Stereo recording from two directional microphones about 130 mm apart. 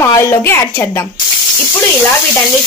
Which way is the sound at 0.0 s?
20° left (ahead or behind).